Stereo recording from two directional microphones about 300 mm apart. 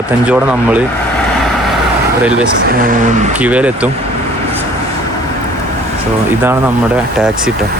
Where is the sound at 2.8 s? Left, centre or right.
Right.